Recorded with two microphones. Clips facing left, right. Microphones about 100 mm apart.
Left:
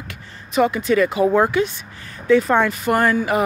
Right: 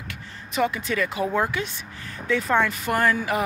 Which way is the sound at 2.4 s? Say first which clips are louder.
Left 4 dB; 30° left (ahead or behind).